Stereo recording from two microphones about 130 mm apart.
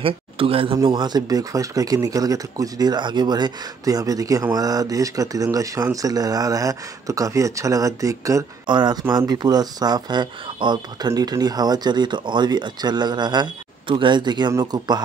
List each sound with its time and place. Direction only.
0.0 s speech: 45° right (ahead or behind)
0.8 s speech: 35° right (ahead or behind)